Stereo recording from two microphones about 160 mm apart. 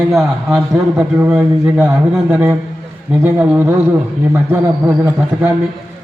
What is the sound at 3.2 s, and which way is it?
Speech, 10° right (ahead or behind).